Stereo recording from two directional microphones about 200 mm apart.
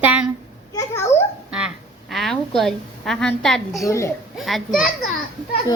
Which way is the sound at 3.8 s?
15° left (ahead or behind).